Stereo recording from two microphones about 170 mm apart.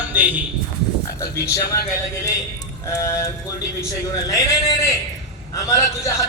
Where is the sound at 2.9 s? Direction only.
15° left (ahead or behind).